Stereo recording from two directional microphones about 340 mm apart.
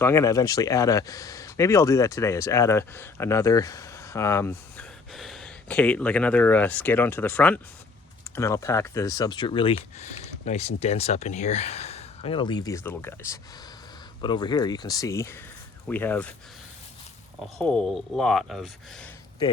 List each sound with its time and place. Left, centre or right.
0.0 s speech: centre
17.4 s speech: centre